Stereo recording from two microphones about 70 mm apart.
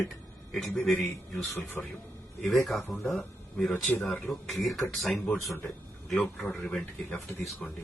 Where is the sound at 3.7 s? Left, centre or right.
Left.